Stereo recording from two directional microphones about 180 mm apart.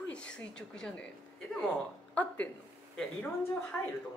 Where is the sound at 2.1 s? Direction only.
10° left (ahead or behind).